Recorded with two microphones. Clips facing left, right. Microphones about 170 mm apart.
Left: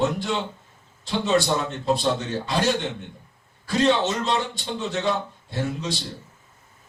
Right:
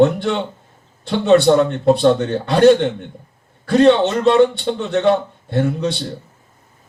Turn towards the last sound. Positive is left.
turn(degrees=-60)  # may be behind; listen again after turning